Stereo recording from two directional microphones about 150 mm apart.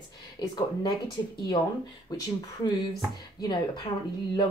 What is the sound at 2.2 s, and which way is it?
Speech, 30° left (ahead or behind).